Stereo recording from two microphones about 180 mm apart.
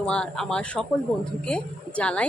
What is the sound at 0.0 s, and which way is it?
Speech, 5° left (ahead or behind).